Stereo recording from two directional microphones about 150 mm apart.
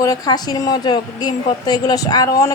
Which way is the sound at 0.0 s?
25° left (ahead or behind).